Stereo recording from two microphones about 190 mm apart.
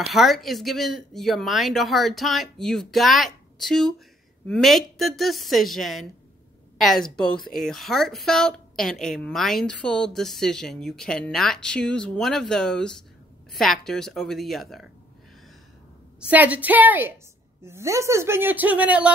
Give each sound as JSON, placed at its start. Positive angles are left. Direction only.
{"t": 0.1, "sound": "a woman's voice", "side_deg": 0}
{"t": 16.2, "sound": "speech", "side_deg": -5}